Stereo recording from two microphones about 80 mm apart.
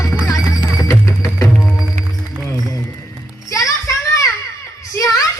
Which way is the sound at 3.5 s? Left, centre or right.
Left.